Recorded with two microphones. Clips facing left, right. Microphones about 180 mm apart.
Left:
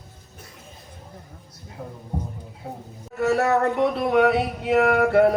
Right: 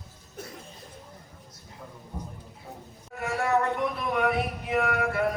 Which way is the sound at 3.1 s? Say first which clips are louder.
Left 6 dB; 70° left (ahead or behind).